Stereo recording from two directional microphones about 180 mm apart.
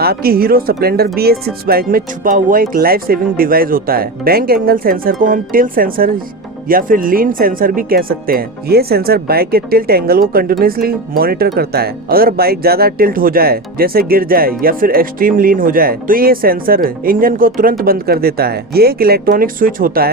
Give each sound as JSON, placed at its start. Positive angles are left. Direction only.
{"t": 0.0, "sound": "speech", "side_deg": -60}